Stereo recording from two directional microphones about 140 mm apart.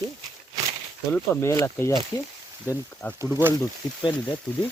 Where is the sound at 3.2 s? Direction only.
15° right (ahead or behind).